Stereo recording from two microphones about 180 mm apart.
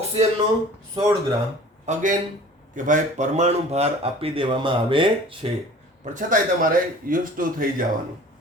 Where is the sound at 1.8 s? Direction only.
45° right (ahead or behind).